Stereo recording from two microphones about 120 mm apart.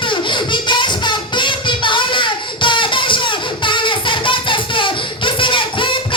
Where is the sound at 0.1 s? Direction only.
40° left (ahead or behind).